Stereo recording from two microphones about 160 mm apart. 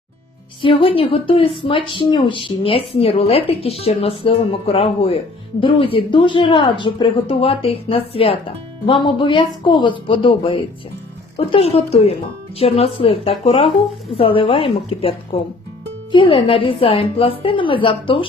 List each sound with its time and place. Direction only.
0.6 s speech: 35° left (ahead or behind)